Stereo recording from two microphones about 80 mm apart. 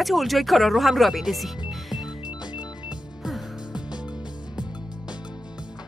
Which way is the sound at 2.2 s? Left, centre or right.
Left.